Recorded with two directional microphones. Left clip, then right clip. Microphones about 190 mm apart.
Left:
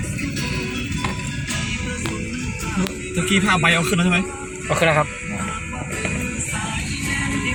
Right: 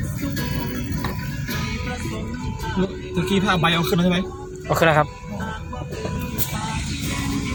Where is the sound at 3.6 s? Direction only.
50° right (ahead or behind).